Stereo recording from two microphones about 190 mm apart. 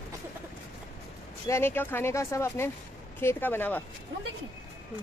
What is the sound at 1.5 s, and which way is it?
Speech, 10° left (ahead or behind).